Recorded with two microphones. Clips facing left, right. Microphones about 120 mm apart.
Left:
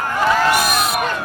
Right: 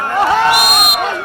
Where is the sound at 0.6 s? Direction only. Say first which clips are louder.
Right 3 dB; 15° right (ahead or behind).